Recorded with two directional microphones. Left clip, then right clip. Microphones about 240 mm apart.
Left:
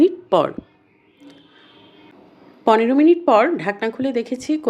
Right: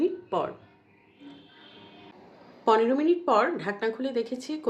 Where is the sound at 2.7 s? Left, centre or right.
Left.